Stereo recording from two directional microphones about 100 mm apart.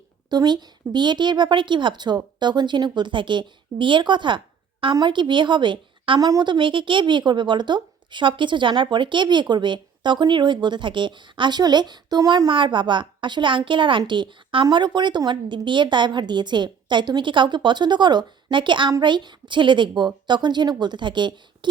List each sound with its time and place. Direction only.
0.3 s a woman's voice: 45° right (ahead or behind)
6.1 s a woman's voice: 40° right (ahead or behind)
12.5 s a woman's voice: 55° right (ahead or behind)